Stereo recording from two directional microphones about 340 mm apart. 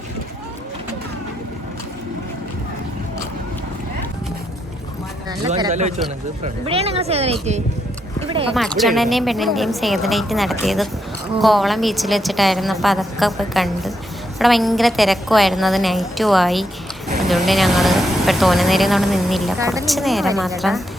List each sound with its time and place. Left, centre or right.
5.5 s speech: centre
8.5 s speech: centre